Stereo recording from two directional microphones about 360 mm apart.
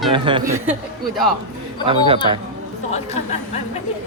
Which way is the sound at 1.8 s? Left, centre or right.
Centre.